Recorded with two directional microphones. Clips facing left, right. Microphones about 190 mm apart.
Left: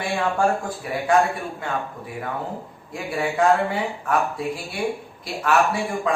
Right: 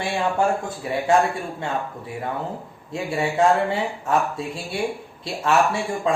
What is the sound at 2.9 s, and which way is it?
Speech, 25° right (ahead or behind).